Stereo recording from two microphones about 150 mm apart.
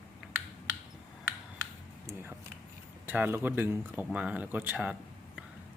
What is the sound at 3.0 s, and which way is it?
Speech, 15° right (ahead or behind).